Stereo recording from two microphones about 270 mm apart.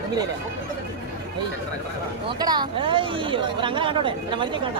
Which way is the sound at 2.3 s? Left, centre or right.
Centre.